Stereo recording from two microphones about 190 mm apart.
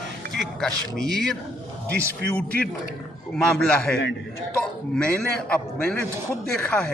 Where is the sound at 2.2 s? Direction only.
60° right (ahead or behind).